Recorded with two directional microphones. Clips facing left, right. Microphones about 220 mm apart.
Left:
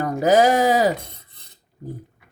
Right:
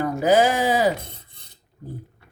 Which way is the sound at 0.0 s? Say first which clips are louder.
Left 2 dB; 40° left (ahead or behind).